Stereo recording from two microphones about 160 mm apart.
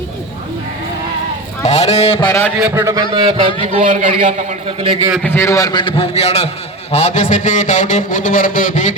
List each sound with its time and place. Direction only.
1.6 s speech: 45° left (ahead or behind)
2.2 s a man's voice: 10° left (ahead or behind)
2.6 s a man's voice: 10° right (ahead or behind)
2.8 s a man's voice: 20° right (ahead or behind)
3.8 s a man's voice: 50° right (ahead or behind)
5.2 s a man's voice: 15° left (ahead or behind); by 9.0 s 50° left (ahead or behind)